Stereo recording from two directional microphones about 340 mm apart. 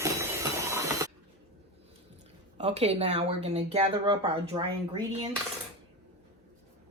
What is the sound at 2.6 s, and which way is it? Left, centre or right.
Speech, centre.